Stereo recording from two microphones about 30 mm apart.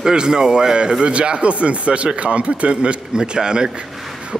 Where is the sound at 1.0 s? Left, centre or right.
Right.